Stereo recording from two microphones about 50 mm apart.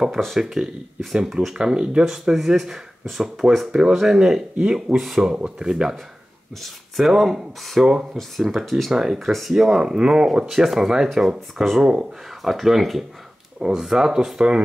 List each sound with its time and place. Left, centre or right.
0.2 s speech: centre
1.1 s speech: centre
6.6 s speech: centre
7.8 s speech: centre
8.2 s speech: centre
8.9 s speech: centre